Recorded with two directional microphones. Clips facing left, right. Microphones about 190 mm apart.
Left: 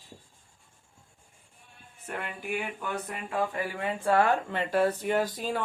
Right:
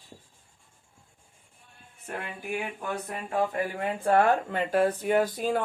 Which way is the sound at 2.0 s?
35° right (ahead or behind).